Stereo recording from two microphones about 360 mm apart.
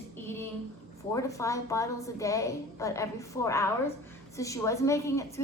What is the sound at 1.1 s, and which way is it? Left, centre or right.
A woman's voice, centre.